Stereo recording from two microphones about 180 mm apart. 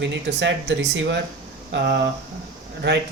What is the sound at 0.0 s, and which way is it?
Speech, 75° right (ahead or behind).